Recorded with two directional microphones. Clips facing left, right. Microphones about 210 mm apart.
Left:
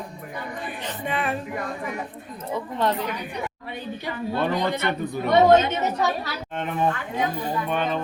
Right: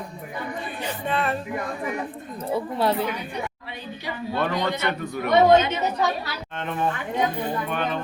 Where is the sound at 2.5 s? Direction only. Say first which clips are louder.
Right 2 dB; 10° right (ahead or behind).